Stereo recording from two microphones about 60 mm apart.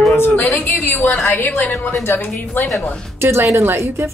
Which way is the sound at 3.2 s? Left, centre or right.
Right.